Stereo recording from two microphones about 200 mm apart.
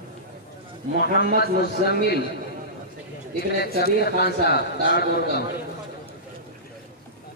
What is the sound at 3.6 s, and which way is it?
A man's voice, 50° left (ahead or behind).